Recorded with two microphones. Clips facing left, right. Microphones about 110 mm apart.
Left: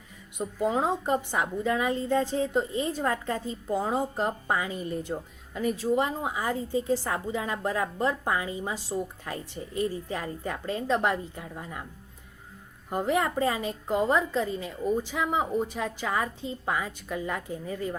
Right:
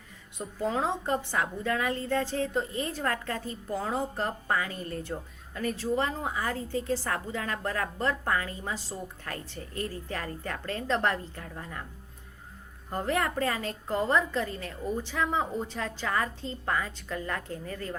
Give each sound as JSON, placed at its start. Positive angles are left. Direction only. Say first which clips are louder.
{"t": 0.3, "sound": "a woman's voice", "louder": "left 3 dB", "side_deg": 15}
{"t": 12.9, "sound": "a woman's voice", "louder": "left 3 dB", "side_deg": 15}